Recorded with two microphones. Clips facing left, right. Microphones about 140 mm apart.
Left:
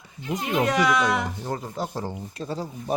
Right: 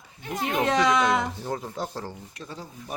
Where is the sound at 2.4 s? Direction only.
35° left (ahead or behind).